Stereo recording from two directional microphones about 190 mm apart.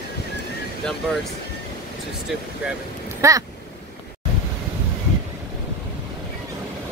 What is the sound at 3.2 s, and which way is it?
Speech, 15° right (ahead or behind).